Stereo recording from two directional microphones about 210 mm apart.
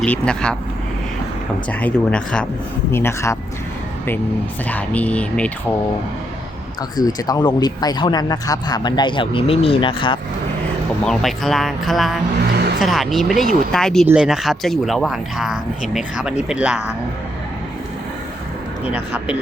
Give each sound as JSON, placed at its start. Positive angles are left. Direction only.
{"t": 0.0, "sound": "speech", "side_deg": 5}
{"t": 1.8, "sound": "speech", "side_deg": 5}
{"t": 4.7, "sound": "speech", "side_deg": 5}
{"t": 6.9, "sound": "speech", "side_deg": 15}
{"t": 11.0, "sound": "speech", "side_deg": 0}
{"t": 18.9, "sound": "speech", "side_deg": -5}